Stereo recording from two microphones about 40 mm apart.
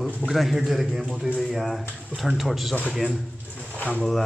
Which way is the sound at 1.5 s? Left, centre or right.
Centre.